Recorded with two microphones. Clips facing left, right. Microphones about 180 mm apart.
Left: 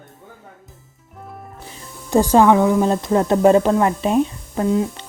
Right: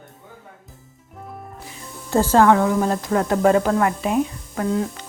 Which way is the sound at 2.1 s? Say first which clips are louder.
Left 2 dB; 15° left (ahead or behind).